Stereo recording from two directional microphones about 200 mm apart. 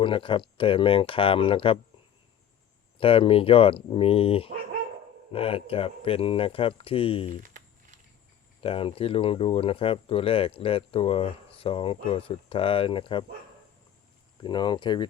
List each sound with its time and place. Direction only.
0.0 s speech: 25° left (ahead or behind)
3.0 s speech: 25° left (ahead or behind)
7.4 s a sound: 40° right (ahead or behind)
8.6 s speech: 25° left (ahead or behind)
14.4 s speech: 20° left (ahead or behind)